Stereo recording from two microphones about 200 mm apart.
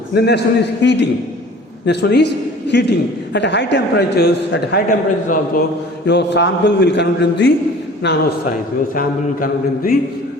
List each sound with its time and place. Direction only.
0.1 s a man's voice: 55° left (ahead or behind)
6.1 s a man's voice: 60° left (ahead or behind)
9.0 s a sound: 45° left (ahead or behind)